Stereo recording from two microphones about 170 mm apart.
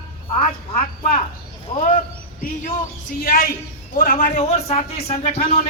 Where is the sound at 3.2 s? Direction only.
60° left (ahead or behind).